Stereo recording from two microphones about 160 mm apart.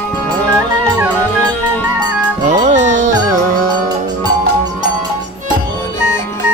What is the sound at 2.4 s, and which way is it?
Music, 50° right (ahead or behind).